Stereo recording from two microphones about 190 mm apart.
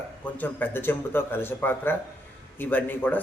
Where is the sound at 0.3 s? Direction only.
10° left (ahead or behind).